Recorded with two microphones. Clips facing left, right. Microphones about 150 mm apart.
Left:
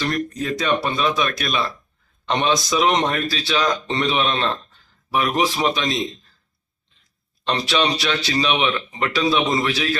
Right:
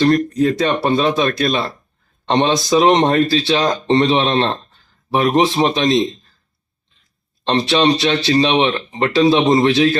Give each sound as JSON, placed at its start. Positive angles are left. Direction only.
{"t": 0.0, "sound": "speech", "side_deg": -35}
{"t": 7.4, "sound": "speech", "side_deg": -25}